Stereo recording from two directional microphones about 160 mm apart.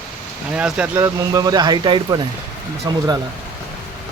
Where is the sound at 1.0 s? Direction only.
25° right (ahead or behind).